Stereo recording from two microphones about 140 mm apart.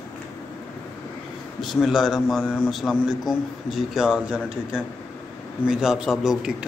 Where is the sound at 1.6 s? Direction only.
Centre (ahead or behind).